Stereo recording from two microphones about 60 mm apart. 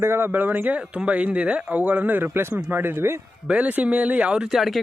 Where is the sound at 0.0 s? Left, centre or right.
Right.